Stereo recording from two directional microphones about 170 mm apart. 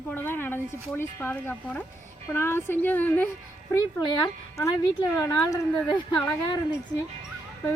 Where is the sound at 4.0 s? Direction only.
25° left (ahead or behind).